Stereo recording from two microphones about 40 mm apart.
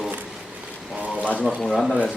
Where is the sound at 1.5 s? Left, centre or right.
Centre.